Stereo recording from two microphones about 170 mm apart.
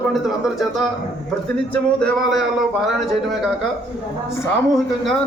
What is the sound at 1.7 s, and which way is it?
Speech, centre (ahead or behind).